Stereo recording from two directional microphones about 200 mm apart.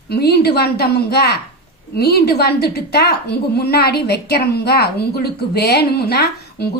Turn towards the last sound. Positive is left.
turn(degrees=55)  # may be behind; listen again after turning